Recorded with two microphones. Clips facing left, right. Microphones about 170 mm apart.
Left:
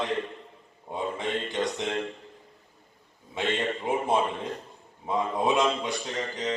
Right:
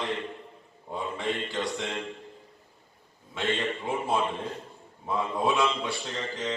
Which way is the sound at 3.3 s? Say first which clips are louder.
Left 1 dB; 20° left (ahead or behind).